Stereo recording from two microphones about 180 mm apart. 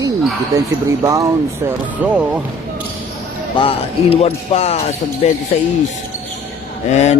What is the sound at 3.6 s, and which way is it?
Speech, 30° left (ahead or behind).